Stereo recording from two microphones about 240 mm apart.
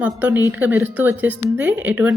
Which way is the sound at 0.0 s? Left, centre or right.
Centre.